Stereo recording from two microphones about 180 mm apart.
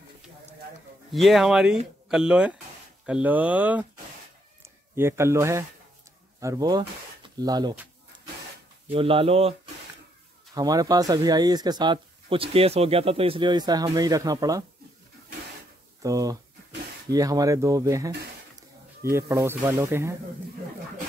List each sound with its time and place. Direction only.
1.1 s speech: centre (ahead or behind)
4.9 s speech: 15° right (ahead or behind)
8.9 s speech: 30° right (ahead or behind)
10.5 s speech: 20° right (ahead or behind)
16.0 s speech: 20° right (ahead or behind)